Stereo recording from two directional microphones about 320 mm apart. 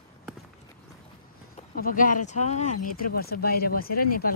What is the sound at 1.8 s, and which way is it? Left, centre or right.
Speech, left.